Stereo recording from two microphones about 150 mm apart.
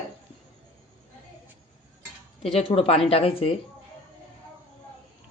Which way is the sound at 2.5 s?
40° left (ahead or behind).